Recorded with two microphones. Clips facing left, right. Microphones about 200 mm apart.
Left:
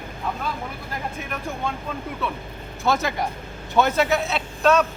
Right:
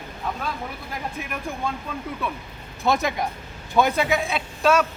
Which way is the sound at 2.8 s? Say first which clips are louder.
Even; 20° right (ahead or behind).